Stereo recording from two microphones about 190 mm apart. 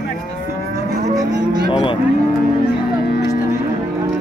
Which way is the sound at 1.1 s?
20° right (ahead or behind).